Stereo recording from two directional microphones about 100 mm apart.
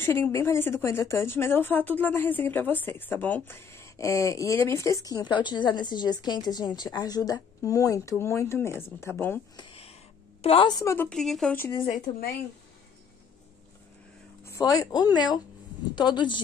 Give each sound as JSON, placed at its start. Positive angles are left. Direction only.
{"t": 0.0, "sound": "speech", "side_deg": 25}
{"t": 9.6, "sound": "a sound", "side_deg": 70}
{"t": 10.4, "sound": "a woman's voice", "side_deg": 70}
{"t": 10.7, "sound": "a woman's voice", "side_deg": 35}
{"t": 11.1, "sound": "speech", "side_deg": 5}
{"t": 14.4, "sound": "a woman's voice", "side_deg": 30}